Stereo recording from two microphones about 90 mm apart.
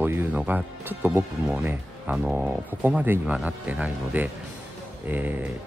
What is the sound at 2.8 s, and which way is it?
Speech, 20° right (ahead or behind).